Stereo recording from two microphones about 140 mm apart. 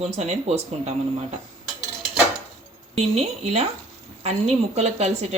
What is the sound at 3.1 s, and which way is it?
Speech, 50° right (ahead or behind).